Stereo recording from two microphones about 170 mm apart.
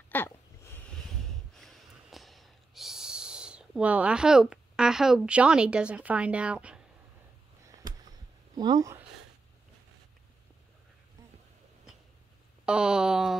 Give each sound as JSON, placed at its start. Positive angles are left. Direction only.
{"t": 0.1, "sound": "a sound", "side_deg": 10}
{"t": 1.6, "sound": "snort", "side_deg": 0}
{"t": 8.5, "sound": "speech", "side_deg": -25}
{"t": 12.6, "sound": "speech", "side_deg": -5}